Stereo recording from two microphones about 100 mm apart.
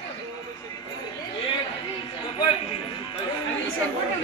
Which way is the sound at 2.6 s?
75° left (ahead or behind).